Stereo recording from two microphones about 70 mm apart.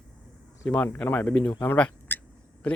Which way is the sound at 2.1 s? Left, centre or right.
Left.